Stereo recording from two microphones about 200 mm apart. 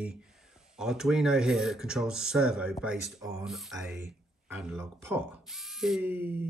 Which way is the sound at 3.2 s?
15° right (ahead or behind).